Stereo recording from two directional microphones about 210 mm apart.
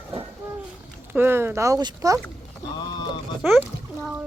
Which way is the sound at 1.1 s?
10° right (ahead or behind).